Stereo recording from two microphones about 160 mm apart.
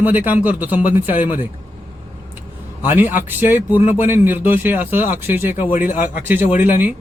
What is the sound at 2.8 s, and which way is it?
Speech, 10° right (ahead or behind).